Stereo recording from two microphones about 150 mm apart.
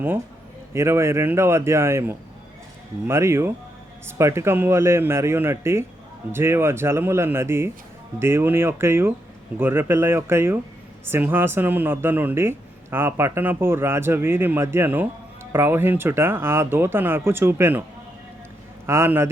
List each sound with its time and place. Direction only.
0.7 s speech: 20° right (ahead or behind)
18.9 s speech: 15° right (ahead or behind)